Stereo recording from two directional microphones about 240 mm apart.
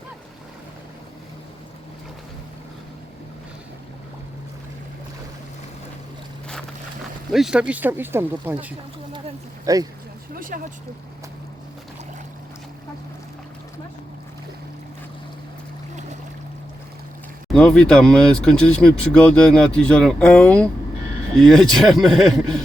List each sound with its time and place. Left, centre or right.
7.3 s speech: centre
9.7 s speech: centre
10.3 s vehicle: right
17.5 s speech: centre